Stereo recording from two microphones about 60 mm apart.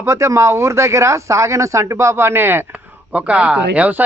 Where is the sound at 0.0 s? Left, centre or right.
Right.